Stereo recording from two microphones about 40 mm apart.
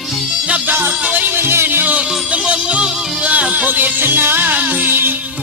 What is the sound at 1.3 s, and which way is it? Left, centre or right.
Music, right.